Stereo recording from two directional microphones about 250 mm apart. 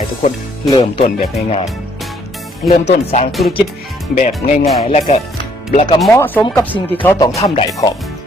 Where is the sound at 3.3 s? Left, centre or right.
Centre.